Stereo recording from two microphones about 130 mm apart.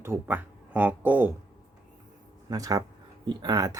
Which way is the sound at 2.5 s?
25° right (ahead or behind).